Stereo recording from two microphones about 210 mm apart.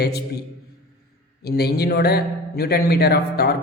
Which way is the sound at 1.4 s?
50° left (ahead or behind).